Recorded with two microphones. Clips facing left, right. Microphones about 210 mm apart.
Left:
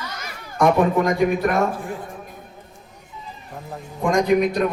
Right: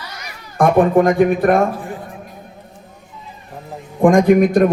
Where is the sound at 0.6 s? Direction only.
55° right (ahead or behind).